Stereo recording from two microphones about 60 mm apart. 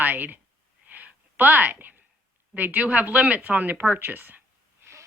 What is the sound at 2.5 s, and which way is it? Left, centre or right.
A woman's voice, right.